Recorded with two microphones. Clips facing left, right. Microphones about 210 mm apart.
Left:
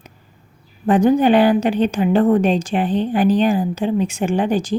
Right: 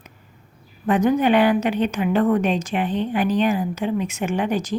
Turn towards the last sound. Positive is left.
turn(degrees=30)  # may be behind; listen again after turning